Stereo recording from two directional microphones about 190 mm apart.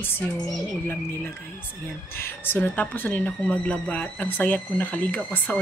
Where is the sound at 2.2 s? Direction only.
10° left (ahead or behind).